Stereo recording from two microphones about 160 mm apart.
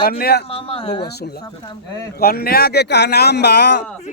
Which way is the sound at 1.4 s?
25° left (ahead or behind).